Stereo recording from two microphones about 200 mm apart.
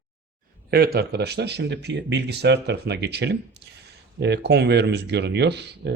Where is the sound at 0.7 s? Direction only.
50° right (ahead or behind).